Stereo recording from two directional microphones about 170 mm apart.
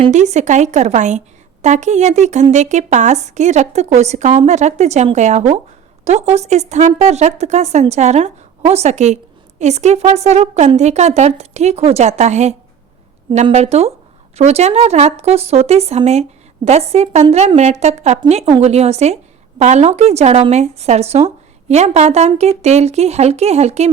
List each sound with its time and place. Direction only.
0.0 s speech: 45° right (ahead or behind)